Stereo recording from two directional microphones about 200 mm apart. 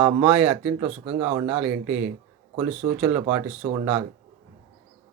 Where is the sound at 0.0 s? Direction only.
5° right (ahead or behind).